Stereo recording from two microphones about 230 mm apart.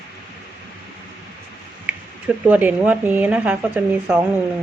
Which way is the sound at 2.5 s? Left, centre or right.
Centre.